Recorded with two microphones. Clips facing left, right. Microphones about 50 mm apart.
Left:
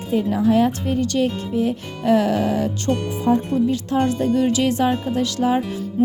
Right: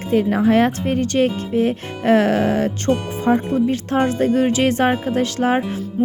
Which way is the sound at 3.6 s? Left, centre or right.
Right.